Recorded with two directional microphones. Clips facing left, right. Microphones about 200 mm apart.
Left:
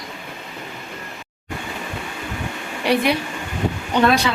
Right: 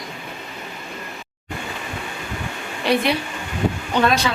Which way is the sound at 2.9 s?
10° left (ahead or behind).